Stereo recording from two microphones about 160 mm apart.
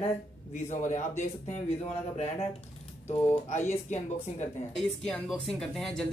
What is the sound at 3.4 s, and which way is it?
Speech, 50° left (ahead or behind).